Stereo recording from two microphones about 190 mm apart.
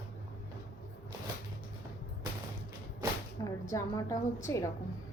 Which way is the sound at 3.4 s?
15° left (ahead or behind).